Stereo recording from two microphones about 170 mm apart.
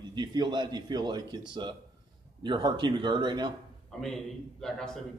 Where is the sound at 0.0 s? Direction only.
25° right (ahead or behind).